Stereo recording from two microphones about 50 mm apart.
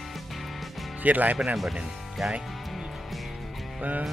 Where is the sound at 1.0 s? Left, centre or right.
Right.